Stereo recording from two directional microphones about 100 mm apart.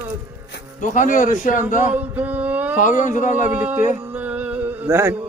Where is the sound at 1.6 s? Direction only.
15° right (ahead or behind).